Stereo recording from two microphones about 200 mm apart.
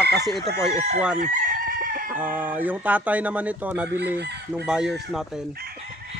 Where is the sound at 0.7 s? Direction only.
35° right (ahead or behind).